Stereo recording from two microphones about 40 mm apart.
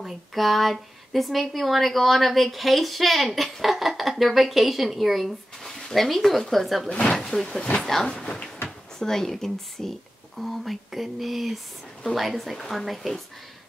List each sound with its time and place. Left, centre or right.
0.0 s speech: centre
7.2 s speech: centre